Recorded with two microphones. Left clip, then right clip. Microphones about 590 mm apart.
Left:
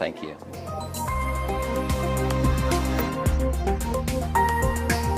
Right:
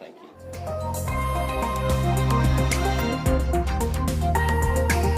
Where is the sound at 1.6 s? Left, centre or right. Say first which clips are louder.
Right 1 dB; centre.